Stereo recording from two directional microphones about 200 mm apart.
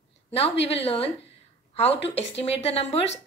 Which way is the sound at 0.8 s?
30° left (ahead or behind).